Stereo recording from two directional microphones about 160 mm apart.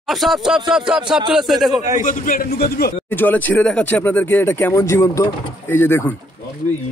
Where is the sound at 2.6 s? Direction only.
75° left (ahead or behind).